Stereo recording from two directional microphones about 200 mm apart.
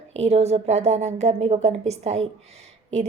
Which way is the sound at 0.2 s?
30° right (ahead or behind).